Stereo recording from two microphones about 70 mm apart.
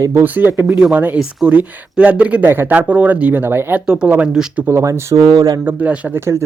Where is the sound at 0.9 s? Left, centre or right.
Right.